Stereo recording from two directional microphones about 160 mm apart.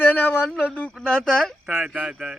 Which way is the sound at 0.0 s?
10° left (ahead or behind).